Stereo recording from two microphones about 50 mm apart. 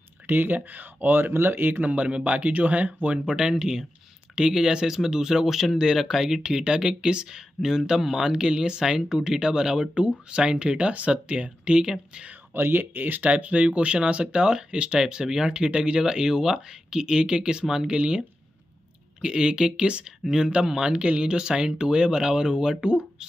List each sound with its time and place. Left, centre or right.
0.3 s speech: right
3.4 s speech: centre
12.5 s speech: right; by 18.2 s centre
19.2 s speech: centre